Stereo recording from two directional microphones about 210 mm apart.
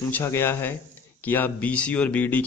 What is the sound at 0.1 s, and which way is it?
A man's voice, 10° left (ahead or behind).